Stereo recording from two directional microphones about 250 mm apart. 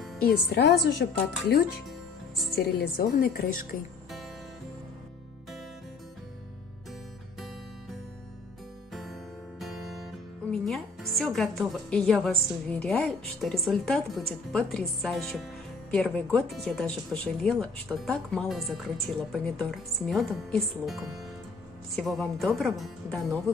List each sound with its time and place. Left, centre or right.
0.2 s a woman's voice: left
2.5 s a woman's voice: left
9.6 s music: centre
10.5 s a woman's voice: centre